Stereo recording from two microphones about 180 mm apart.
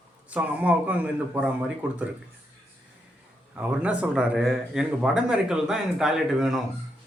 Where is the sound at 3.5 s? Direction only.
5° right (ahead or behind).